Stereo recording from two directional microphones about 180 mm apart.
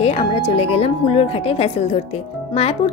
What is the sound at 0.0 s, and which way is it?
Speech, 35° left (ahead or behind).